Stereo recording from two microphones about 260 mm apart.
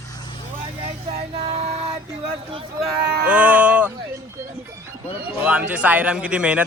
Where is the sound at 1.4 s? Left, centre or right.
Right.